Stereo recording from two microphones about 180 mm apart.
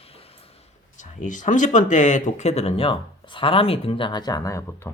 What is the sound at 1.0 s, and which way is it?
Speech, 45° left (ahead or behind).